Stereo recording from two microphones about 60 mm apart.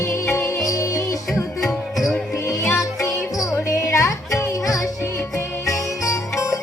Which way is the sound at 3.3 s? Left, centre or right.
Left.